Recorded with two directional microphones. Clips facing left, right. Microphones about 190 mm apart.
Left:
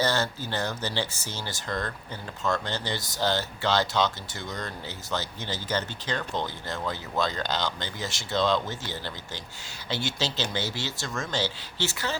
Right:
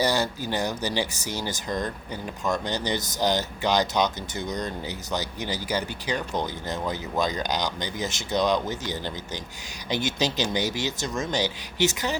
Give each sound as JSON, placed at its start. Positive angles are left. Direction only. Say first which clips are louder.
{"t": 0.0, "sound": "speech", "louder": "right 2 dB", "side_deg": -15}